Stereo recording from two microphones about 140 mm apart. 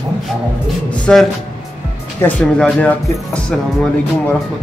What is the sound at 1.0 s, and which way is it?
Speech, 5° left (ahead or behind).